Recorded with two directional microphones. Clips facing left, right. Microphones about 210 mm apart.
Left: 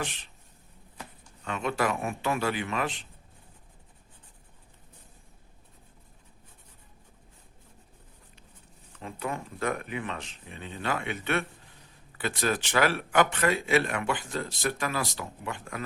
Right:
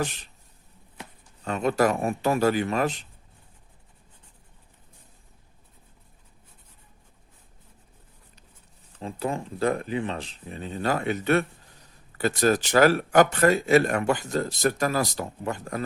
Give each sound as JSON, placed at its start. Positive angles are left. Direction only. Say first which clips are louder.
{"t": 0.0, "sound": "a man's voice", "louder": "right 6 dB", "side_deg": -40}
{"t": 1.5, "sound": "a man's voice", "louder": "right 6 dB", "side_deg": -40}
{"t": 9.0, "sound": "a man's voice", "louder": "right 5 dB", "side_deg": -30}